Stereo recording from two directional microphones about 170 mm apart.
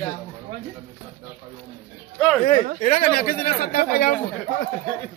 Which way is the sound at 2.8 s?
55° left (ahead or behind).